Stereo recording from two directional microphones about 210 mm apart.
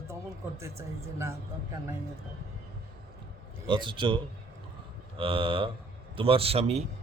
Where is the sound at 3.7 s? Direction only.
25° right (ahead or behind).